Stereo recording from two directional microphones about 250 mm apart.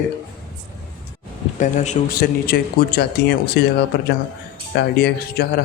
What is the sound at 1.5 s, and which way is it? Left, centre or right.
Speech, left.